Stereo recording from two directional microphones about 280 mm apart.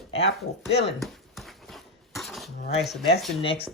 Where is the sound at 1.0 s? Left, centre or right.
Centre.